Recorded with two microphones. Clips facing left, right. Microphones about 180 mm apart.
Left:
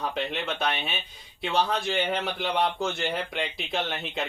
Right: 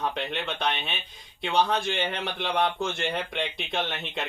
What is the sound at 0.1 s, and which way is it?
Speech, centre (ahead or behind).